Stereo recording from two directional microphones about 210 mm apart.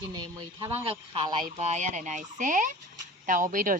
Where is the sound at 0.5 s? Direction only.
25° right (ahead or behind).